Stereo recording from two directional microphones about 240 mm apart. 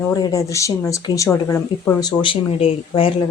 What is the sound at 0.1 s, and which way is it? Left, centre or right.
Speech, centre.